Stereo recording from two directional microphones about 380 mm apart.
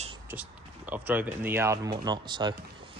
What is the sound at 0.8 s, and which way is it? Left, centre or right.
Speech, centre.